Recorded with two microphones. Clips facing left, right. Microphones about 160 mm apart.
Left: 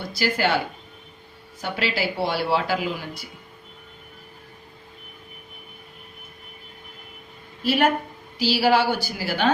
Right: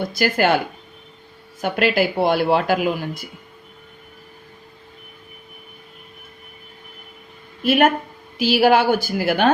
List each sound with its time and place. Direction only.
0.0 s speech: 50° right (ahead or behind)
1.6 s speech: 50° right (ahead or behind)
7.6 s speech: 50° right (ahead or behind)